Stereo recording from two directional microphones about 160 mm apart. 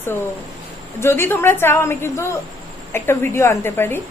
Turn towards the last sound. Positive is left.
turn(degrees=15)  # may be behind; listen again after turning